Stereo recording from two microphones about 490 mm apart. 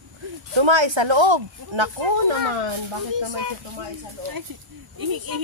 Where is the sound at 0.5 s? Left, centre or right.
Right.